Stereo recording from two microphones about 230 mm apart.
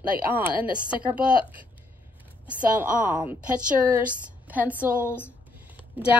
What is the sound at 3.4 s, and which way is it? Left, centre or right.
A woman's voice, centre.